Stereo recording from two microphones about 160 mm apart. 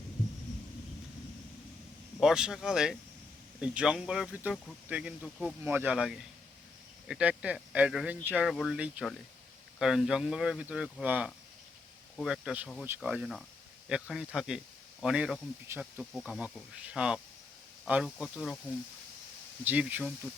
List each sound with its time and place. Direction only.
2.2 s speech: 5° right (ahead or behind)
19.6 s speech: 10° right (ahead or behind)